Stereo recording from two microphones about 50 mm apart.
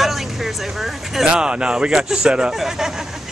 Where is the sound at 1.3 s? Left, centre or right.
Centre.